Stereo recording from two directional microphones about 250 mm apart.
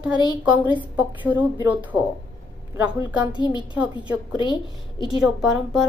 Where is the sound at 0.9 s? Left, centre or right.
Centre.